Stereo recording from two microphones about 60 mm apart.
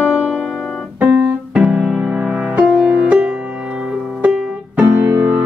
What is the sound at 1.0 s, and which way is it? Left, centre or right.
Keyboard, right.